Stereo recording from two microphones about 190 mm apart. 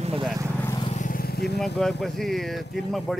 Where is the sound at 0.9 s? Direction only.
45° left (ahead or behind).